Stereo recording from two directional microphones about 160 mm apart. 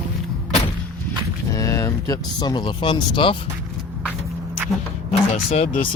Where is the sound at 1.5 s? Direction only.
20° left (ahead or behind).